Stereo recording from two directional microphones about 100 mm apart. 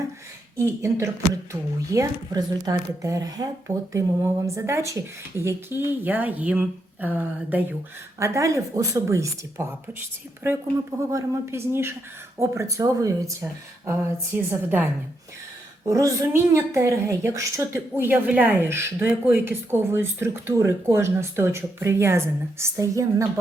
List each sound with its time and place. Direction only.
0.5 s a woman's voice: 30° right (ahead or behind)
8.2 s a woman's voice: 30° right (ahead or behind)
13.8 s a woman's voice: 25° right (ahead or behind)
15.9 s a woman's voice: 35° right (ahead or behind)